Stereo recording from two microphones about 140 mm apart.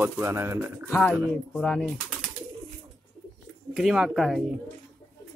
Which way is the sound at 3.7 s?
Centre (ahead or behind).